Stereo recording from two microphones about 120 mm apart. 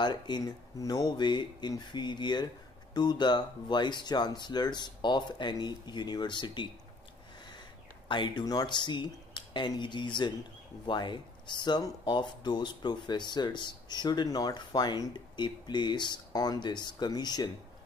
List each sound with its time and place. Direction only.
0.0 s speech: 35° left (ahead or behind)
8.1 s speech: 40° left (ahead or behind)